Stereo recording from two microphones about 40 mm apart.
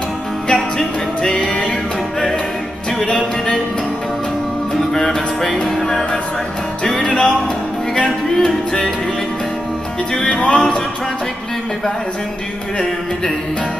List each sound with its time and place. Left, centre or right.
0.5 s music: centre
4.9 s music: centre
10.3 s music: left